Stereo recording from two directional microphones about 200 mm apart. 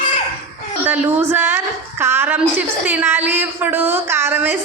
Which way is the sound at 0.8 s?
10° right (ahead or behind).